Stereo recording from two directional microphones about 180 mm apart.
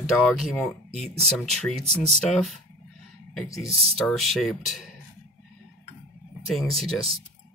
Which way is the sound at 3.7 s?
35° right (ahead or behind).